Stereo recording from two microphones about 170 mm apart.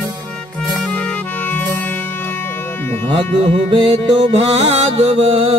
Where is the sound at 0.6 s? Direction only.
Centre (ahead or behind).